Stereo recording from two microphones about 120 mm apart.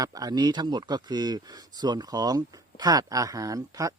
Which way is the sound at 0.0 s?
30° right (ahead or behind).